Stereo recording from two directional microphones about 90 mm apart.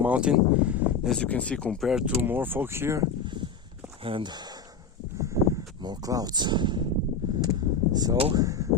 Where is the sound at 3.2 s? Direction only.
60° right (ahead or behind).